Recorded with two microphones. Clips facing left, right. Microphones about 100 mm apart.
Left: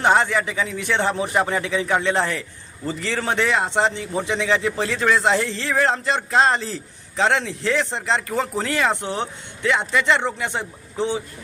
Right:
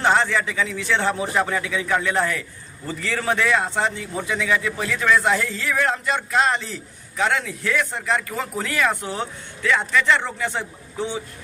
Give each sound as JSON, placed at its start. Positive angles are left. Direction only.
{"t": 0.0, "sound": "a man's voice", "side_deg": 15}